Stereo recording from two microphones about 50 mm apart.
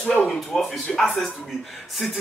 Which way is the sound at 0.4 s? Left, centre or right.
Centre.